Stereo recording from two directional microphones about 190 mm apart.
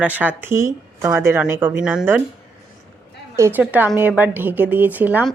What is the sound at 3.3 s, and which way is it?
Speech, 10° right (ahead or behind).